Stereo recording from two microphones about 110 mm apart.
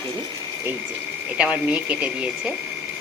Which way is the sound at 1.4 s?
10° right (ahead or behind).